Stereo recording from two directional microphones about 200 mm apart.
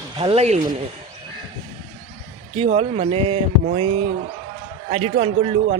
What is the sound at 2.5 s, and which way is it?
A man's voice, 30° right (ahead or behind).